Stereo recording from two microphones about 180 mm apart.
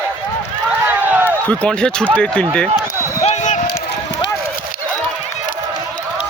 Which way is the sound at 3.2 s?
40° left (ahead or behind).